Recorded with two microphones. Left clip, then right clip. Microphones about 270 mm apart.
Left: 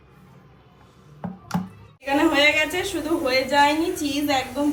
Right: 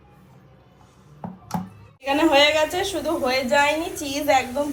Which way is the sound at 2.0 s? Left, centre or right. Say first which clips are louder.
Right 1 dB; centre.